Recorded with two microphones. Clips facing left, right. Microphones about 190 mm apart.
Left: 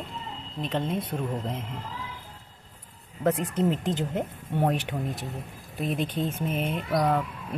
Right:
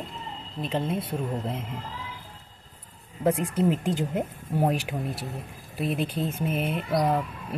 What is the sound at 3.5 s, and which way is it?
Speech, 10° right (ahead or behind).